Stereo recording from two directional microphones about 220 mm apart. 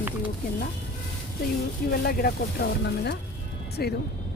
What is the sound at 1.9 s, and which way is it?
Speech, 45° left (ahead or behind).